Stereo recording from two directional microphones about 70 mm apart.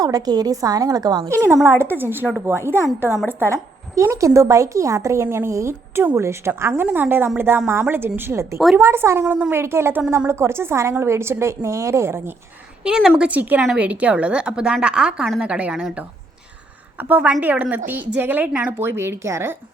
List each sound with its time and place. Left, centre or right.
0.0 s a woman's voice: right
1.6 s a woman's voice: right
3.5 s a woman's voice: right
12.8 s a woman's voice: centre
13.2 s a woman's voice: right
18.8 s a woman's voice: right